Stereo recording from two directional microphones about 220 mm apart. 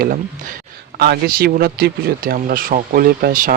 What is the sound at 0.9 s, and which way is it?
Speech, 45° right (ahead or behind).